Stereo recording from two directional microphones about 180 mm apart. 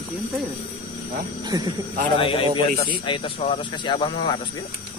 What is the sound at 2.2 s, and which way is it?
A man's voice, 30° left (ahead or behind).